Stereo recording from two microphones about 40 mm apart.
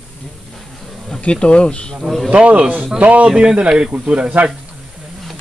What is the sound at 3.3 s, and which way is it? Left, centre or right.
Speech, right.